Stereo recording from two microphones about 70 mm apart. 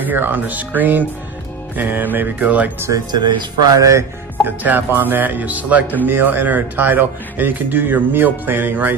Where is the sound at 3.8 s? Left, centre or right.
Right.